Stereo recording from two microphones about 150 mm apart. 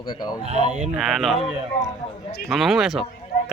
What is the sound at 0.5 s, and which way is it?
Speech, 50° right (ahead or behind).